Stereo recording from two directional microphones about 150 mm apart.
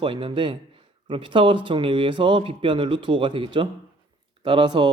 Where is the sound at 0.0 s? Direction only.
35° right (ahead or behind).